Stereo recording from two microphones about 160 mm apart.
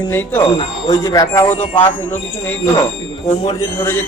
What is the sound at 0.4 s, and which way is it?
Speech, 30° left (ahead or behind).